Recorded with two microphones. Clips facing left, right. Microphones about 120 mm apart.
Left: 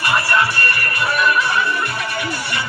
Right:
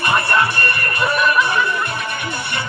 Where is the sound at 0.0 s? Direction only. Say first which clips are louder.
Right 1 dB; 20° right (ahead or behind).